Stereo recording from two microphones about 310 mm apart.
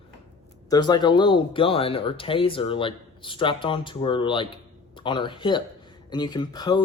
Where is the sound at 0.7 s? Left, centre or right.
Centre.